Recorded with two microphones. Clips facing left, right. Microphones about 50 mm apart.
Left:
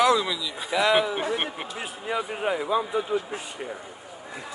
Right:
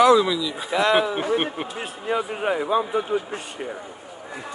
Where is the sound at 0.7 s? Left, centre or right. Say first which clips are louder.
Right 2 dB; right.